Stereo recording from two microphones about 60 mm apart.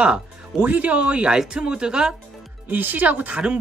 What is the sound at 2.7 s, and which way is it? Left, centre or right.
Speech, right.